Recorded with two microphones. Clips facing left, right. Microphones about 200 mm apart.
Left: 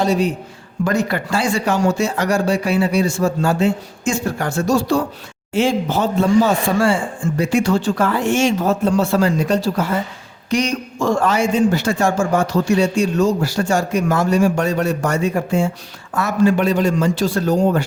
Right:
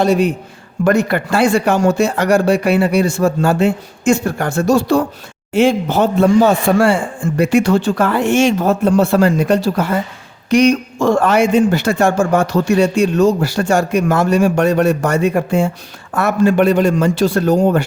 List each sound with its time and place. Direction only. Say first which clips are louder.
0.0 s a man's voice: right 4 dB; 55° right (ahead or behind)